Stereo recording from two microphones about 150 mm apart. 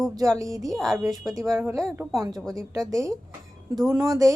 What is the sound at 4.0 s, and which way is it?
Speech, 25° right (ahead or behind).